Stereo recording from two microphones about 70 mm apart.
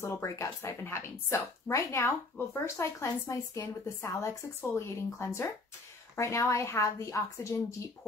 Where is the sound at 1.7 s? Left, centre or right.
Left.